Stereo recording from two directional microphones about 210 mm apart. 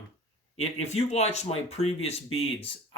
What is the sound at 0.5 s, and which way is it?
Speech, 30° left (ahead or behind).